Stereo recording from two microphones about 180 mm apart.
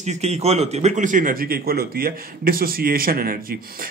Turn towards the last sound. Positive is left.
turn(degrees=-55)  # may be behind; listen again after turning